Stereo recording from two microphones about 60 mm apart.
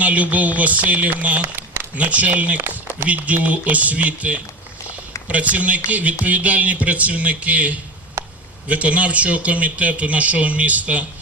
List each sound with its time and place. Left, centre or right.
0.0 s speech: right
2.6 s a sound: right
3.2 s speech: right